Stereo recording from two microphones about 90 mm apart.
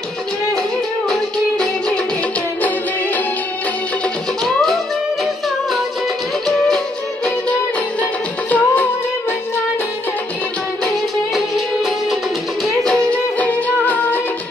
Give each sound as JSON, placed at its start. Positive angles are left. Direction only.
{"t": 4.5, "sound": "music", "side_deg": 5}
{"t": 8.0, "sound": "music", "side_deg": 15}
{"t": 11.3, "sound": "music", "side_deg": 0}
{"t": 12.8, "sound": "music", "side_deg": 15}